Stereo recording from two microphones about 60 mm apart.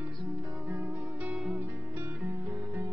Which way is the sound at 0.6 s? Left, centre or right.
Right.